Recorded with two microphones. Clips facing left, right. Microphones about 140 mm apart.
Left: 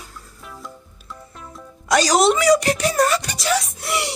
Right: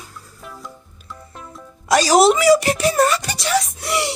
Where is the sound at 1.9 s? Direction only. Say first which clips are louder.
Right 3 dB; 5° right (ahead or behind).